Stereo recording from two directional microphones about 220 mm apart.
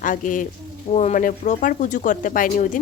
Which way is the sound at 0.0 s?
35° left (ahead or behind).